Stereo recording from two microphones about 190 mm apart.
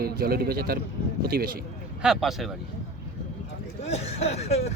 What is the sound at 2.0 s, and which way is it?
Speech, centre (ahead or behind).